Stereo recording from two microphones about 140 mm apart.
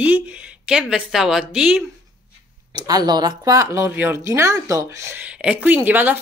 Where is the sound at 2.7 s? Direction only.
30° right (ahead or behind).